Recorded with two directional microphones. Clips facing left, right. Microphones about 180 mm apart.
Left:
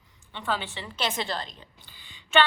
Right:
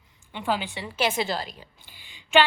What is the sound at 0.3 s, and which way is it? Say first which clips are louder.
A woman's voice: right 3 dB; 15° right (ahead or behind).